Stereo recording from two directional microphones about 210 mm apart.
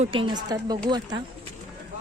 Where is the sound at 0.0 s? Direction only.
25° right (ahead or behind).